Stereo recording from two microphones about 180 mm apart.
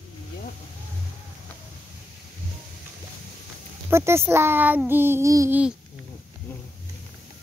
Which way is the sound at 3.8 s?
15° right (ahead or behind).